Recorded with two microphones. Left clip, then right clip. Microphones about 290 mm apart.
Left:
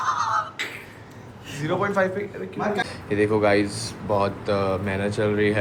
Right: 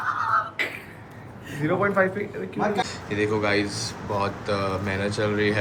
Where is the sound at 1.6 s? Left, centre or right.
Centre.